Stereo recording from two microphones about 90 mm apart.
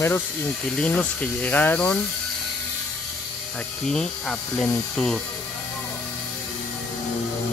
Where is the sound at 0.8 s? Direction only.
15° left (ahead or behind).